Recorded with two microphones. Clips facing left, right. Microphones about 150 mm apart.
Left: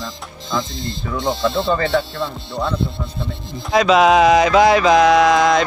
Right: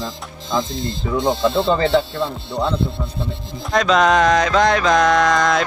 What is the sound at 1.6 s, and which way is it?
Speech, 20° right (ahead or behind).